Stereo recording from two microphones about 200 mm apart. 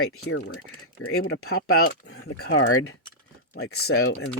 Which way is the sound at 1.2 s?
70° left (ahead or behind).